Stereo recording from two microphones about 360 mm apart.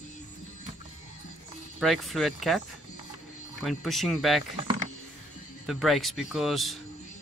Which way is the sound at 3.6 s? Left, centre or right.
Centre.